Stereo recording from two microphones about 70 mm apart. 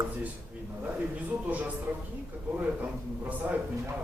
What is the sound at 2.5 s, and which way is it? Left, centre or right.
A man's voice, right.